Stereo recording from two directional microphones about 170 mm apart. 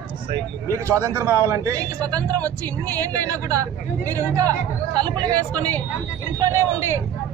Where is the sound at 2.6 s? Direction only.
10° left (ahead or behind).